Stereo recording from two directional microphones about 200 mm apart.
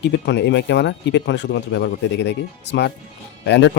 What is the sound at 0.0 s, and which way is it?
Speech, 60° left (ahead or behind).